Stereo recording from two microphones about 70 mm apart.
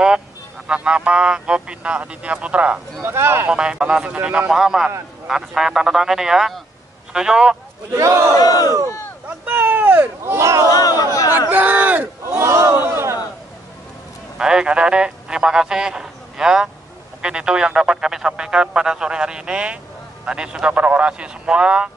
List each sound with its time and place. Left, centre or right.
0.7 s speech: centre
3.0 s speech: right
3.4 s speech: centre
7.9 s speech: right
8.4 s speech: left
9.4 s a sound: right
10.3 s speech: right
10.7 s speech: left
11.1 s crowd: left
11.5 s speech: right
12.3 s speech: right
12.8 s a sound: right
14.4 s a man's voice: centre